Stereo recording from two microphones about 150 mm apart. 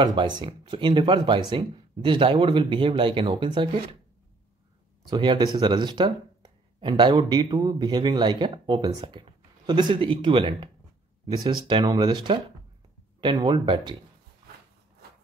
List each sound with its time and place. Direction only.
0.0 s speech: 30° right (ahead or behind)
5.1 s speech: 30° right (ahead or behind)